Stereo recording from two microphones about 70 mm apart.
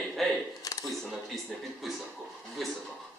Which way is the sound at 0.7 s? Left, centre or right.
Left.